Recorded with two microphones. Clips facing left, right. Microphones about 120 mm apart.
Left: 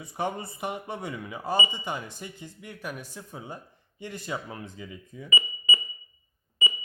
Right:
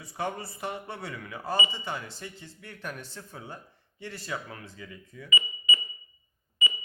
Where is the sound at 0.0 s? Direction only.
20° left (ahead or behind).